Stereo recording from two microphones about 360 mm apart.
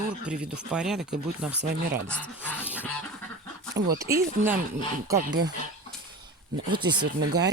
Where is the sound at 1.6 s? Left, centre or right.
Right.